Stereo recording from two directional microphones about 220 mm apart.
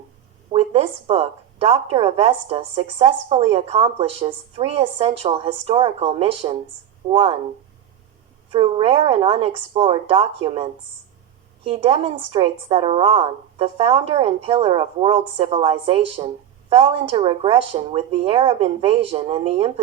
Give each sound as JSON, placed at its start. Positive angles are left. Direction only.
{"t": 0.5, "sound": "a woman's voice", "side_deg": -25}
{"t": 8.5, "sound": "a woman's voice", "side_deg": -25}